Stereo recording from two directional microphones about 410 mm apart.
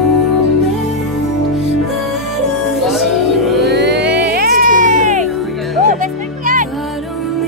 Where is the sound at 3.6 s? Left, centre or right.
Right.